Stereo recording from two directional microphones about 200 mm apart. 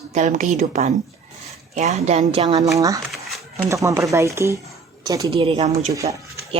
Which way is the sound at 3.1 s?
Centre (ahead or behind).